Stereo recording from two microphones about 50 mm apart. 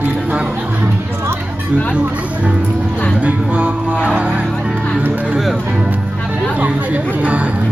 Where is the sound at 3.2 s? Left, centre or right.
Right.